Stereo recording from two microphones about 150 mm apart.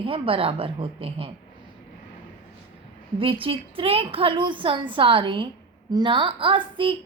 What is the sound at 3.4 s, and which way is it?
A woman's voice, 40° right (ahead or behind).